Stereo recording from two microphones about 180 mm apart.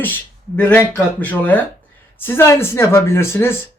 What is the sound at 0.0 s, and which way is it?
Speech, 10° left (ahead or behind).